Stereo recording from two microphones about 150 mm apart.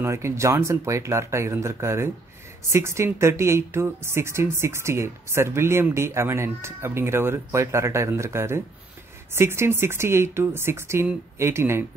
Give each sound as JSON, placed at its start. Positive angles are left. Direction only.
{"t": 0.0, "sound": "speech", "side_deg": -20}